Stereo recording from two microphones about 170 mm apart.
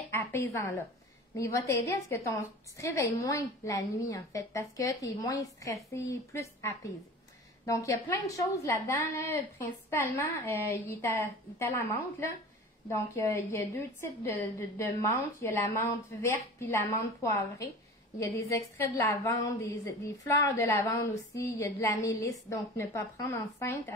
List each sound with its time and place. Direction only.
0.1 s a woman's voice: 10° left (ahead or behind)
13.1 s a woman's voice: 20° left (ahead or behind)